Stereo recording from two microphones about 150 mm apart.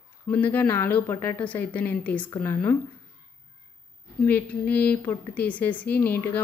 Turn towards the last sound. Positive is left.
turn(degrees=15)  # may be behind; listen again after turning